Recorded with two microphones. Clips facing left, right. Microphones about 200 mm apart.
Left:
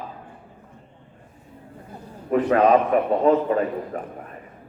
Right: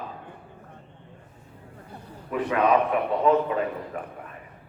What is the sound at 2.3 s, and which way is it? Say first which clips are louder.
A man's voice: left 5 dB; 40° left (ahead or behind).